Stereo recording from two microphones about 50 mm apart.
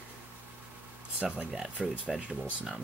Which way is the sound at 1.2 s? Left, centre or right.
Centre.